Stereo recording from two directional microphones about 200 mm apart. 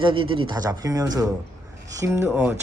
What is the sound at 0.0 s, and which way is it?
A man's voice, 25° right (ahead or behind).